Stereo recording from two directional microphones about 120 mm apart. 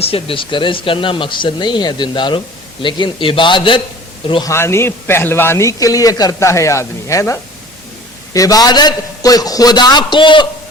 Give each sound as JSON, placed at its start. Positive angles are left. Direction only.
{"t": 0.0, "sound": "speech", "side_deg": 50}
{"t": 4.4, "sound": "a man's voice", "side_deg": 20}